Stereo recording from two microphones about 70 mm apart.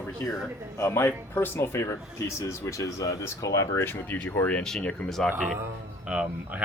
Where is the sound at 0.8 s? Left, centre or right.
Left.